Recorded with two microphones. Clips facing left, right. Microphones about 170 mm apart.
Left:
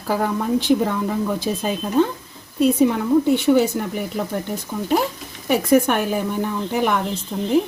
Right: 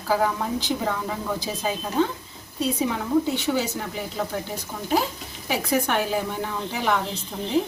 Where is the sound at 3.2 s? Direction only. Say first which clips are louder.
Left 9 dB; 55° left (ahead or behind).